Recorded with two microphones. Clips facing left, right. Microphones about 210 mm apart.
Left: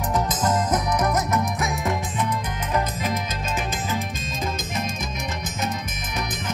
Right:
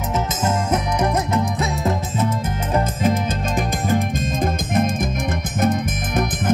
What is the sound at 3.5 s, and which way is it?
Music, 55° right (ahead or behind).